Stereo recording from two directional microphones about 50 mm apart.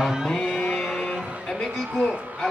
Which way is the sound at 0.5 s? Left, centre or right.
Centre.